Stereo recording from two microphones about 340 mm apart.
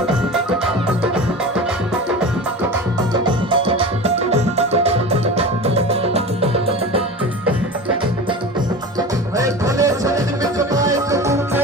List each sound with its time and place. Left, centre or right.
3.1 s music: centre
9.0 s music: centre